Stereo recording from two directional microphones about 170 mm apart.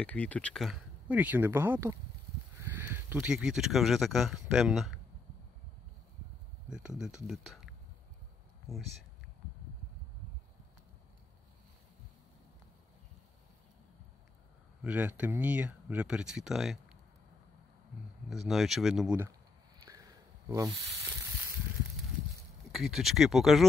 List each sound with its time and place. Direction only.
0.0 s speech: 10° left (ahead or behind)
6.7 s speech: 5° right (ahead or behind)
14.8 s speech: 10° right (ahead or behind)
18.3 s speech: centre (ahead or behind)
19.8 s a sound: 20° right (ahead or behind)
22.7 s speech: centre (ahead or behind)